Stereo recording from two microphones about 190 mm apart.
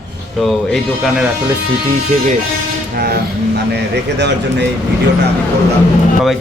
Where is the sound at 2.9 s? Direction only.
55° right (ahead or behind).